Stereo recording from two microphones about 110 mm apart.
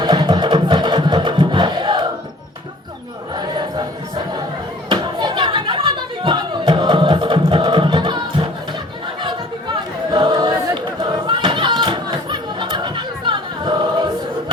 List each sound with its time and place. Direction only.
0.0 s music: 45° right (ahead or behind)
3.3 s a sound: 40° right (ahead or behind)
4.9 s music: 45° right (ahead or behind)
10.1 s choir: 40° right (ahead or behind)
11.0 s chatter: 45° right (ahead or behind)